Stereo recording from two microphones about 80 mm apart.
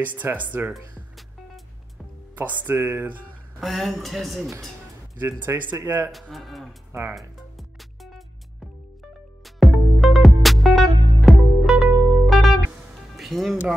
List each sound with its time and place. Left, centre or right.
0.0 s speech: right
2.3 s speech: right
3.6 s a woman's voice: centre
5.2 s speech: right
6.1 s a woman's voice: centre
6.9 s speech: right
7.2 s music: centre
9.4 s music: centre